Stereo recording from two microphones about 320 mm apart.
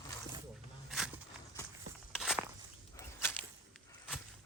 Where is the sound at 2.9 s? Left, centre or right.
Centre.